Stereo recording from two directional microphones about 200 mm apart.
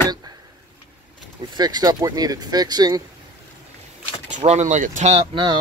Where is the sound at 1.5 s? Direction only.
20° right (ahead or behind).